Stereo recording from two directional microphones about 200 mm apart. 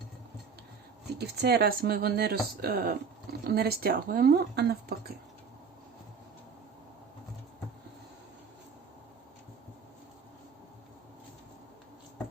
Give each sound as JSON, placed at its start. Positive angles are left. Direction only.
{"t": 1.0, "sound": "speech", "side_deg": -55}